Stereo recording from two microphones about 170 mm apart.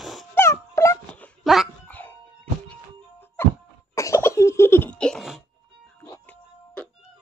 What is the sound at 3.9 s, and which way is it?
Cough, 15° left (ahead or behind).